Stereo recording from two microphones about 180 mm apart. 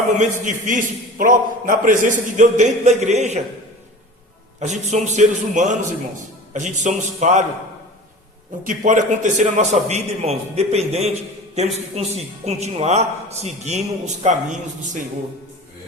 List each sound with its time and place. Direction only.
0.2 s a man's voice: 45° right (ahead or behind)
4.6 s a man's voice: 40° right (ahead or behind)
8.6 s a man's voice: 45° right (ahead or behind)